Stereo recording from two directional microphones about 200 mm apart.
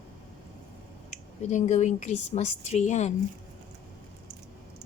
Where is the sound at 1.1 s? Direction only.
35° left (ahead or behind).